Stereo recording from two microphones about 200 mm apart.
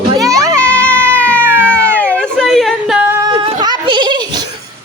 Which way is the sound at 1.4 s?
10° right (ahead or behind).